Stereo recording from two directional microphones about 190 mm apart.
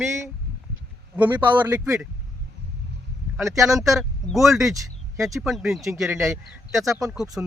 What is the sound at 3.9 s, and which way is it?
Speech, centre (ahead or behind).